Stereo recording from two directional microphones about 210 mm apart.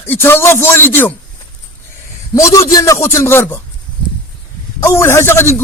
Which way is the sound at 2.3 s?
15° left (ahead or behind).